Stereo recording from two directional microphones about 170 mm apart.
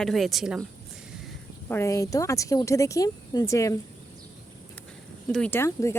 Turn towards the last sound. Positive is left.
turn(degrees=15)  # may be behind; listen again after turning